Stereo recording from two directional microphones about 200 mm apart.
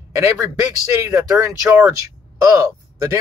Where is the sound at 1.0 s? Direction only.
15° right (ahead or behind).